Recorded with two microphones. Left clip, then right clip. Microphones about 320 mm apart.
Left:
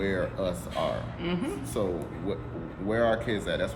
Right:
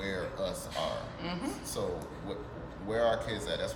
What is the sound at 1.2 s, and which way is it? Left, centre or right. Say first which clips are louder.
Speech: left 5 dB; centre.